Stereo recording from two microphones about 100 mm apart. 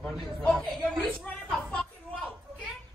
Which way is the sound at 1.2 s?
10° left (ahead or behind).